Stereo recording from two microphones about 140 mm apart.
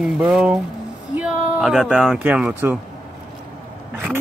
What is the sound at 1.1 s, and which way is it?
Speech, 5° right (ahead or behind).